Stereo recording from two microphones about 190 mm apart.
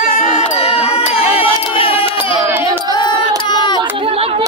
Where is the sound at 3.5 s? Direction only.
25° left (ahead or behind).